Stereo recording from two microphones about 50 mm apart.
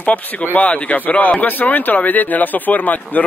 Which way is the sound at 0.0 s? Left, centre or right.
Left.